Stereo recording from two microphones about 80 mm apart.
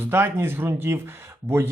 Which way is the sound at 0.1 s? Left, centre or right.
Right.